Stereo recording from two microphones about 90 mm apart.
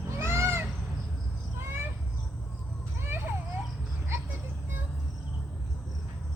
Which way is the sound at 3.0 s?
25° right (ahead or behind).